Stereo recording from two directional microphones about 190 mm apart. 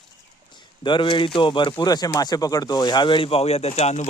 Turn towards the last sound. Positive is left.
turn(degrees=35)  # may be behind; listen again after turning